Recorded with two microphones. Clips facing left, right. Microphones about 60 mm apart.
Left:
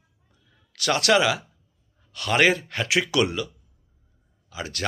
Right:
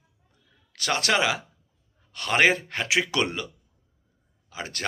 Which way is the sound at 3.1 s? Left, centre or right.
Right.